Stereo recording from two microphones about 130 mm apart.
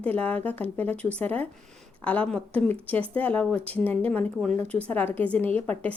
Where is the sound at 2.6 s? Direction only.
15° left (ahead or behind).